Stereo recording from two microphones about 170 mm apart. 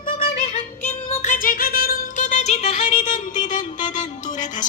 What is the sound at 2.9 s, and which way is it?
Music, 50° left (ahead or behind).